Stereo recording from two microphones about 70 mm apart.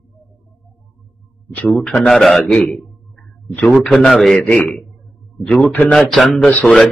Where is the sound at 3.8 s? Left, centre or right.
Centre.